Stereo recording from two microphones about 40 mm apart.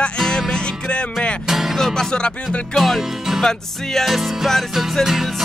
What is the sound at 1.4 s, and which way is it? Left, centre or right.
Music, centre.